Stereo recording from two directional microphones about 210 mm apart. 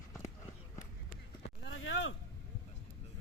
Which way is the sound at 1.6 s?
65° left (ahead or behind).